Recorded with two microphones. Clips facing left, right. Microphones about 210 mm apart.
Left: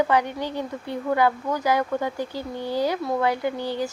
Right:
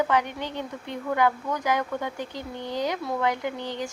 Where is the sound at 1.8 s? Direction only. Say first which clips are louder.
Left 4 dB; 10° left (ahead or behind).